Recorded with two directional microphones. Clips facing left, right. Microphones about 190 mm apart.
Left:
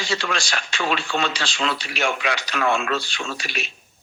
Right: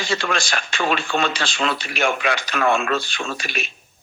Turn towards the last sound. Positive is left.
turn(degrees=-50)  # may be behind; listen again after turning